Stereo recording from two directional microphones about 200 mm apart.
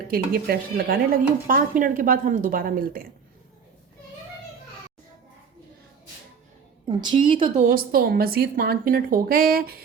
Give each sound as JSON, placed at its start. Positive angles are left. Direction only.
{"t": 0.1, "sound": "speech", "side_deg": -45}
{"t": 6.8, "sound": "a woman's voice", "side_deg": -25}
{"t": 7.7, "sound": "speech", "side_deg": -50}